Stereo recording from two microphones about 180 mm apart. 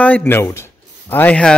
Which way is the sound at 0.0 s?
10° left (ahead or behind).